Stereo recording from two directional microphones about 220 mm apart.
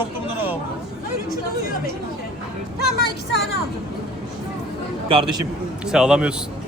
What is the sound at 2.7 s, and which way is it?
Speech, 45° left (ahead or behind).